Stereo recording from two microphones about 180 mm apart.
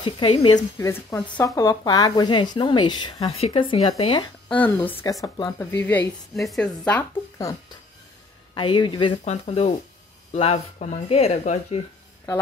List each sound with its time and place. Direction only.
0.0 s speech: 30° left (ahead or behind)
0.7 s a woman's voice: 15° left (ahead or behind)
4.6 s a woman's voice: 10° left (ahead or behind)
8.5 s speech: 25° left (ahead or behind)
9.2 s speech: 35° left (ahead or behind)